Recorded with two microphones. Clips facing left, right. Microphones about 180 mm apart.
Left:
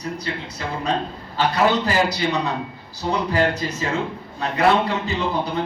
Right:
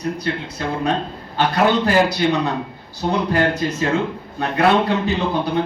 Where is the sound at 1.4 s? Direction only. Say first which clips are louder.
Right 2 dB; 60° right (ahead or behind).